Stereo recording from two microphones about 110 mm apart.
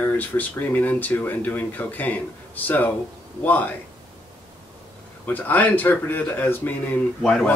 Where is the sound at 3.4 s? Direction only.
15° left (ahead or behind).